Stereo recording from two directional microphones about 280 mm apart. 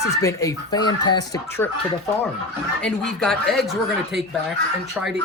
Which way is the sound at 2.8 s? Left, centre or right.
Centre.